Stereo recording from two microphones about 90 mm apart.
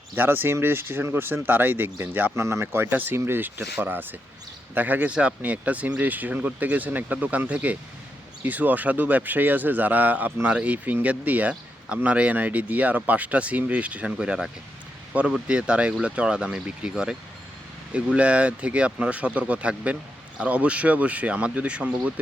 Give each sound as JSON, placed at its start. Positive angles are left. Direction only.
{"t": 0.2, "sound": "speech", "side_deg": -25}